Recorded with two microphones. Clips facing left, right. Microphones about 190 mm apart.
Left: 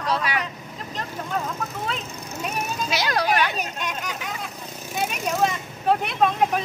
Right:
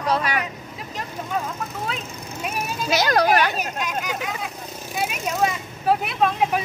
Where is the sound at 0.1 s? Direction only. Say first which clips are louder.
Right 2 dB; 45° right (ahead or behind).